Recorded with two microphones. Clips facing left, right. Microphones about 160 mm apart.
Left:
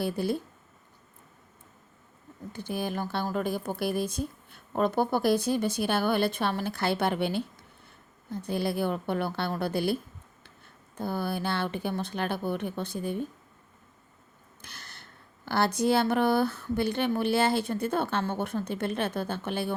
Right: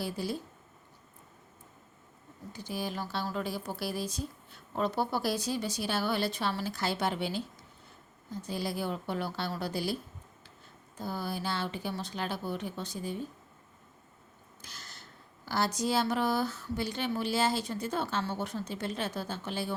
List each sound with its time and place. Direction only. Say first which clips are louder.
0.0 s speech: left 6 dB; 55° left (ahead or behind)
2.5 s speech: left 4 dB; 55° left (ahead or behind)
14.6 s speech: left 2 dB; 60° left (ahead or behind)